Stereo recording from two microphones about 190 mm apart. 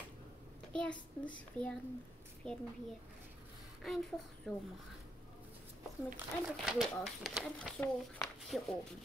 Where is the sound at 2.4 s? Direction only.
5° left (ahead or behind).